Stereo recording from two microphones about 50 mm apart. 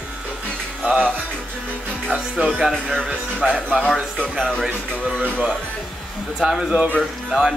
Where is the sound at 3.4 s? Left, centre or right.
Centre.